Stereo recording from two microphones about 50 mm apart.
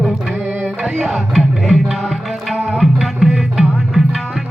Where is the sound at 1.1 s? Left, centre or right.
Centre.